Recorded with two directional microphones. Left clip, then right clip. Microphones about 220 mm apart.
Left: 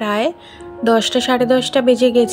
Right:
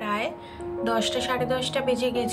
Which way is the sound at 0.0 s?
25° left (ahead or behind).